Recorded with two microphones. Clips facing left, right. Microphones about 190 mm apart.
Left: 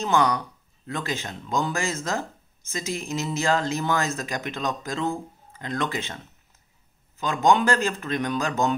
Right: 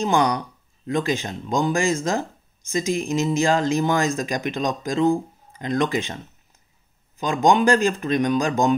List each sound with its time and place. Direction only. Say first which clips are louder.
0.0 s speech: right 2 dB; 15° right (ahead or behind)